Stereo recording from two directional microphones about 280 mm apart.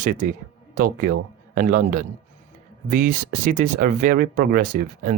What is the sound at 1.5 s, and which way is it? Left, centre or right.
Speech, right.